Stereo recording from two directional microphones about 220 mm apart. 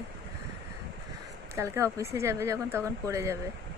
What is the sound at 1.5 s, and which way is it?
Speech, 10° right (ahead or behind).